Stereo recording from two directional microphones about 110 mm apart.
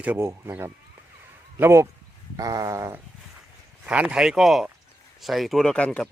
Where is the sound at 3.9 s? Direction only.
10° right (ahead or behind); by 6.0 s 10° left (ahead or behind).